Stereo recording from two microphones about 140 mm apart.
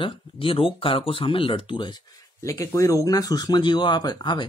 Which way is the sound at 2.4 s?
20° left (ahead or behind).